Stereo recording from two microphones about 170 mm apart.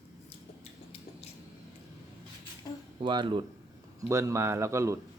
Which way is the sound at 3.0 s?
30° right (ahead or behind).